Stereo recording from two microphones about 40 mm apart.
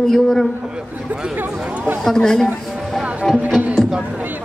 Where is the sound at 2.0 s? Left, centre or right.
Centre.